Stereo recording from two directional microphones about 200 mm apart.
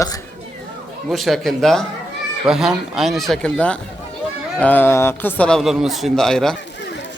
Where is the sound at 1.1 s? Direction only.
Centre (ahead or behind).